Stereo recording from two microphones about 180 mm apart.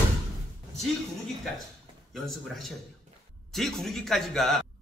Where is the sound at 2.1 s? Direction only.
Centre (ahead or behind).